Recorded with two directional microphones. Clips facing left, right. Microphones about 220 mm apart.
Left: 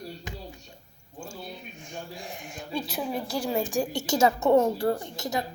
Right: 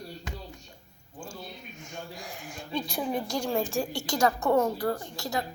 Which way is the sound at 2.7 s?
5° left (ahead or behind).